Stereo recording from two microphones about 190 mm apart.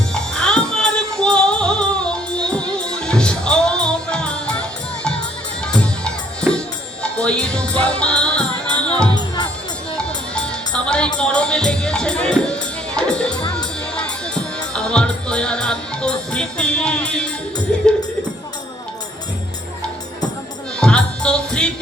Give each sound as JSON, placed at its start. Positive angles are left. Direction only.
{"t": 0.1, "sound": "music", "side_deg": 5}
{"t": 5.6, "sound": "music", "side_deg": 5}
{"t": 9.1, "sound": "music", "side_deg": 20}
{"t": 10.0, "sound": "music", "side_deg": 5}
{"t": 20.7, "sound": "music", "side_deg": 5}